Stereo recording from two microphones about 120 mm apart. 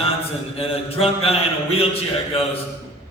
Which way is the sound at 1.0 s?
55° left (ahead or behind).